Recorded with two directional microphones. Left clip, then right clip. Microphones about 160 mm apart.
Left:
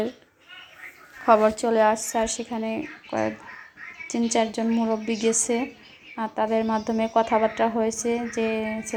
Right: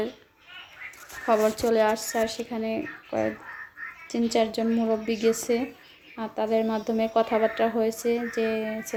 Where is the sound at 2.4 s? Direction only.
Centre (ahead or behind).